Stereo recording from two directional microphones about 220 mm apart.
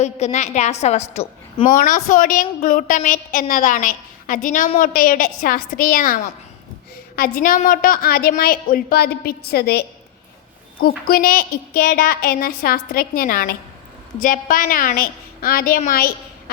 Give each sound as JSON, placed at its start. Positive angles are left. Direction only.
{"t": 0.0, "sound": "a woman's voice", "side_deg": 30}
{"t": 7.2, "sound": "a woman's voice", "side_deg": 40}
{"t": 10.8, "sound": "a woman's voice", "side_deg": 40}